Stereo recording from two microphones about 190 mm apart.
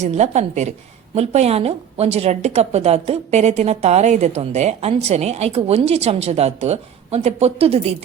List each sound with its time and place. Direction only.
0.0 s a woman's voice: 35° right (ahead or behind)